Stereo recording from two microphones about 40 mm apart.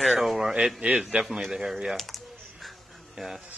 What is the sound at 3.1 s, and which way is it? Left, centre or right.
Speech, centre.